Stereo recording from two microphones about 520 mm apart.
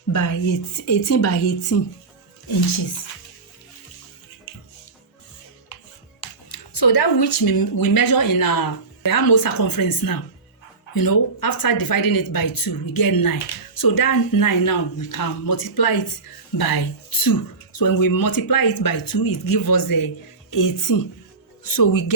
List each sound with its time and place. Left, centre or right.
0.1 s a woman's voice: left
6.1 s speech: left